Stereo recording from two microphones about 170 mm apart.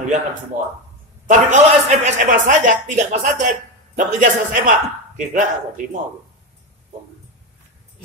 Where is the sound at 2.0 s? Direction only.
45° right (ahead or behind).